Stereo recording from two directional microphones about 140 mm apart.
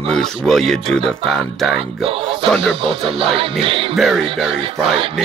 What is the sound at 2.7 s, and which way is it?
Speech, 40° right (ahead or behind).